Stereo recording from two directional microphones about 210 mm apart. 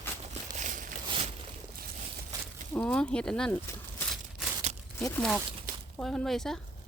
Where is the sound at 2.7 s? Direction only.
5° left (ahead or behind).